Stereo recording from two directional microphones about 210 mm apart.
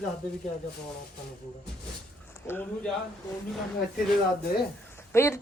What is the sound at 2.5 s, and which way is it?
Speech, 10° left (ahead or behind).